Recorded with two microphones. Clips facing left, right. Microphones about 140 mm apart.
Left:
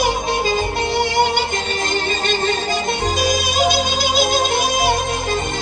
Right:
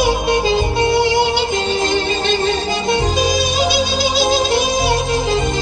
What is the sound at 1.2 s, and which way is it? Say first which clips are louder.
Music: right 2 dB; 50° left (ahead or behind).